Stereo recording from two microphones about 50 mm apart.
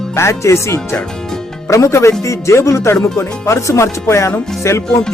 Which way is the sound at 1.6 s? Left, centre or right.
Left.